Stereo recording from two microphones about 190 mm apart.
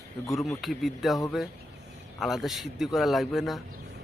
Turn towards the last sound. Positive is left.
turn(degrees=0)  # may be behind; listen again after turning